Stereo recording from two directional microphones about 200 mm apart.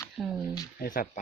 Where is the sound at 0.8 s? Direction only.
45° left (ahead or behind).